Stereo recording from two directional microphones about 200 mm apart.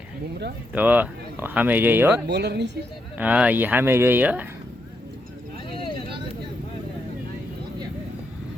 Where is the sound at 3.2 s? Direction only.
5° right (ahead or behind).